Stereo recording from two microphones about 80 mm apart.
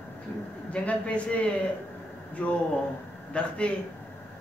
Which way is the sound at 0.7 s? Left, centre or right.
Centre.